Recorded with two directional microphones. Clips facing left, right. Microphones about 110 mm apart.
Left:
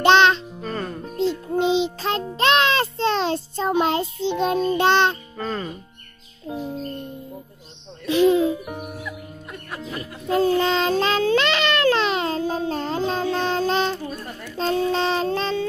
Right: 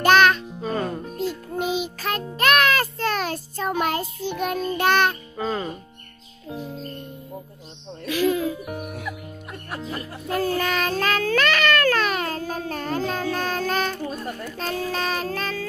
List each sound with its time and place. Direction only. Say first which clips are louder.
0.0 s music: left 1 dB; 25° left (ahead or behind)
0.6 s music: right 3 dB; 10° right (ahead or behind)
1.1 s music: left 5 dB; 25° left (ahead or behind)
5.4 s music: right 2 dB; 10° right (ahead or behind)
8.0 s hoot: left 5 dB; 25° left (ahead or behind)
10.2 s child singing: left 5 dB; 25° left (ahead or behind)